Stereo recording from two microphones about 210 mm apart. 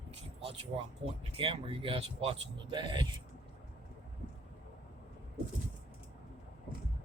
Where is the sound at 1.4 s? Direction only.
25° right (ahead or behind).